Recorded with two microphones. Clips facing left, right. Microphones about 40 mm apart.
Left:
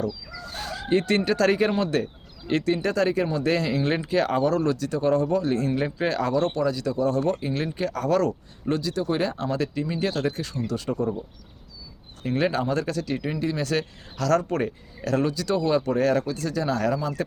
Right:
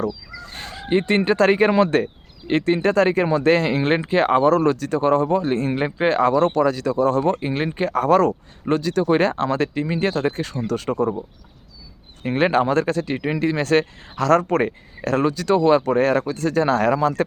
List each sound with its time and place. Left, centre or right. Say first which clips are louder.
0.5 s speech: right 2 dB; right
12.2 s speech: right 6 dB; right
13.3 s speech: right 9 dB; right